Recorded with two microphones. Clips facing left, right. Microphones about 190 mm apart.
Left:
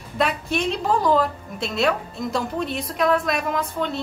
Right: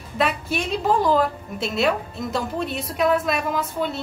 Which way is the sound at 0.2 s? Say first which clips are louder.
Left 1 dB; centre (ahead or behind).